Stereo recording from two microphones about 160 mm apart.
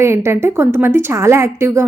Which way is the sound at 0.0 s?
15° right (ahead or behind).